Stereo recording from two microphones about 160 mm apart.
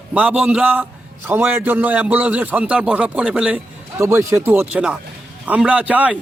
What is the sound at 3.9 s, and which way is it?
A man's voice, 20° right (ahead or behind).